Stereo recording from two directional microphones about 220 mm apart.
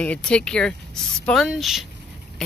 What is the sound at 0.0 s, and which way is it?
Speech, 5° left (ahead or behind).